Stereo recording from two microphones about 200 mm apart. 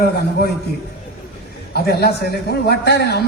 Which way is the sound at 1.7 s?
50° left (ahead or behind).